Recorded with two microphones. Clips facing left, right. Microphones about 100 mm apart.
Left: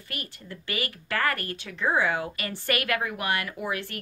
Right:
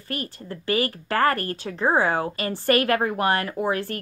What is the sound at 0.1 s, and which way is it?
Speech, 35° right (ahead or behind).